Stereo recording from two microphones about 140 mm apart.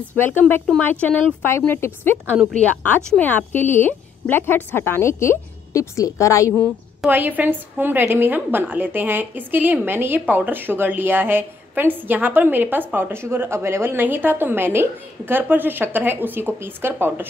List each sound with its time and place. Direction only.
0.2 s a woman's voice: 15° left (ahead or behind)
7.1 s a woman's voice: 15° right (ahead or behind)